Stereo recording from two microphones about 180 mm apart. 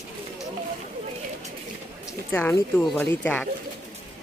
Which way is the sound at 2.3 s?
10° left (ahead or behind).